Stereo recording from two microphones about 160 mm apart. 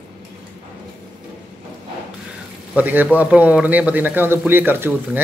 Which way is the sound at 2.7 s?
10° right (ahead or behind).